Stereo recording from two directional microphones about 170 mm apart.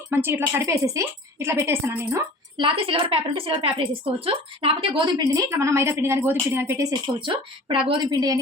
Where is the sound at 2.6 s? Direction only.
30° right (ahead or behind).